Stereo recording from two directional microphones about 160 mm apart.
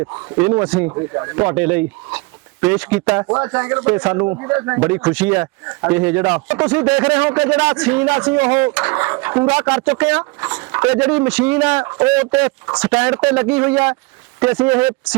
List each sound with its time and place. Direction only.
0.4 s a man's voice: 10° right (ahead or behind)
0.9 s speech: 20° right (ahead or behind)
1.5 s a man's voice: 10° right (ahead or behind)
4.2 s a man's voice: 15° right (ahead or behind)
5.0 s a man's voice: 10° right (ahead or behind)